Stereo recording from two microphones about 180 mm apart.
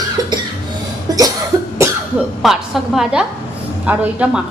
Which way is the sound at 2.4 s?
Centre (ahead or behind).